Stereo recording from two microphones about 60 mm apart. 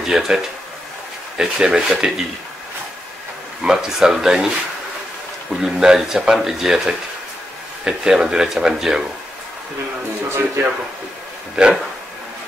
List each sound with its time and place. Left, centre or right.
0.0 s speech: centre
3.6 s speech: centre
5.5 s speech: centre
10.3 s speech: right